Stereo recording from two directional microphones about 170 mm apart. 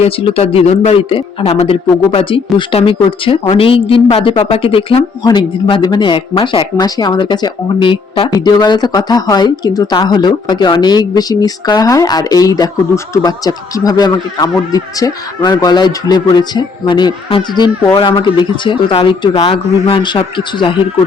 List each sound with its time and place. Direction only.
0.0 s a woman's voice: 35° left (ahead or behind)